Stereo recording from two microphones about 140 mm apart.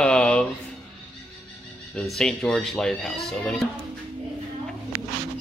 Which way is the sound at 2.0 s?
5° left (ahead or behind).